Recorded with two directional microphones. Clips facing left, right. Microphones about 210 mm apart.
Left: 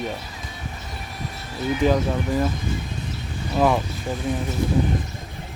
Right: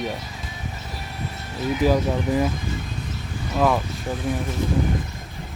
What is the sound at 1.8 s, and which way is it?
Speech, 10° right (ahead or behind).